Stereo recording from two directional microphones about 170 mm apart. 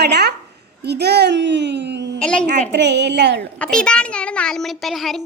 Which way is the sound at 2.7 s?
90° right.